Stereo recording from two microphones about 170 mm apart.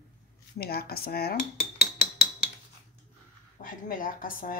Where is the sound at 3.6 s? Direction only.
50° left (ahead or behind).